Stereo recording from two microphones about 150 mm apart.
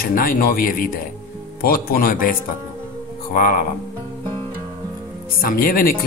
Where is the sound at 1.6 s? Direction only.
85° left; by 3.6 s 70° left (ahead or behind).